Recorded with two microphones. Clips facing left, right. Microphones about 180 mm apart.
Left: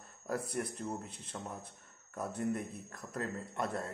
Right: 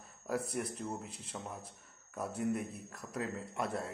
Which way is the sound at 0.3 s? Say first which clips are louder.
Even; 5° right (ahead or behind).